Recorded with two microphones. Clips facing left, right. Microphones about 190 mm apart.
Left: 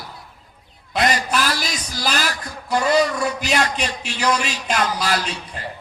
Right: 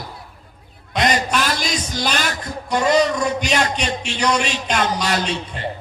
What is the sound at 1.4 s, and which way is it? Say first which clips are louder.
Speech: right 2 dB; 25° right (ahead or behind).